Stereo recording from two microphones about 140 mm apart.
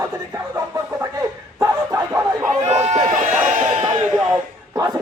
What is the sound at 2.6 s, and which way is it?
Run, 50° right (ahead or behind).